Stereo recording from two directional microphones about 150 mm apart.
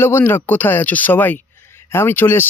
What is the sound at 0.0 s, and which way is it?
Speech, 15° left (ahead or behind).